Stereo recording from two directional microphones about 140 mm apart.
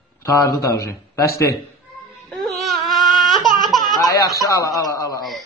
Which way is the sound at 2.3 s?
Centre (ahead or behind).